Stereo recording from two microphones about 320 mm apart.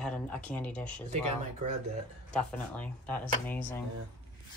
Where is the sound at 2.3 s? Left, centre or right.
Centre.